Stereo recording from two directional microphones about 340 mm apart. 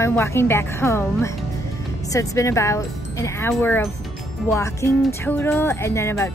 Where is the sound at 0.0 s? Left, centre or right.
Centre.